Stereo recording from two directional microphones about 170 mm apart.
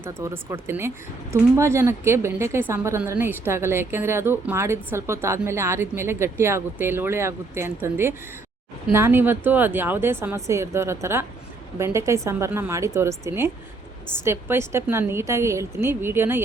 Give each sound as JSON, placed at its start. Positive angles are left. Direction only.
{"t": 0.0, "sound": "speech", "side_deg": -15}